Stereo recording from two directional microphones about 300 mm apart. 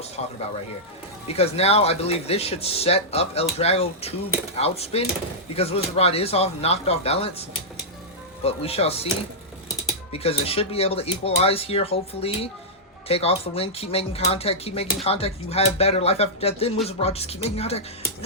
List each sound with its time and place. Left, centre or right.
1.3 s speech: centre
8.4 s speech: centre
10.1 s speech: centre